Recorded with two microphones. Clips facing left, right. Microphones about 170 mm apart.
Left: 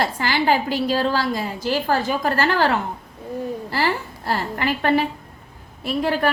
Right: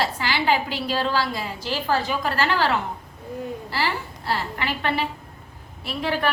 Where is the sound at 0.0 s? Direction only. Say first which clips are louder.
Left 3 dB; 45° left (ahead or behind).